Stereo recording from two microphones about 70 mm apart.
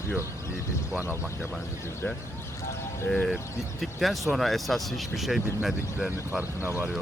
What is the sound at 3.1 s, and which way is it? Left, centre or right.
Speech, centre.